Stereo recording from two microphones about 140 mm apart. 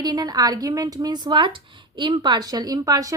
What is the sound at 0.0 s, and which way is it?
A woman's voice, 30° right (ahead or behind).